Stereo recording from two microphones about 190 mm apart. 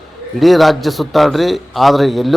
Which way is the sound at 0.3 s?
Centre (ahead or behind).